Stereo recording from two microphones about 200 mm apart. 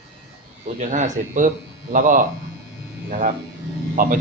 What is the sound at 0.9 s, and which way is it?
A man's voice, 40° right (ahead or behind).